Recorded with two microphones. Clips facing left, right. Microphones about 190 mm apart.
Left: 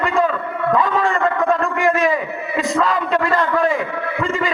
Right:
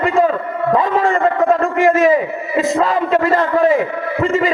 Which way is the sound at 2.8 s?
25° right (ahead or behind).